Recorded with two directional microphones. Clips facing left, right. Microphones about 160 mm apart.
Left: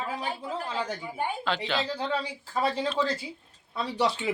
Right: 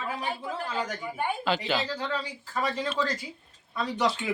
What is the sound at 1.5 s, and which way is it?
Speech, 5° right (ahead or behind).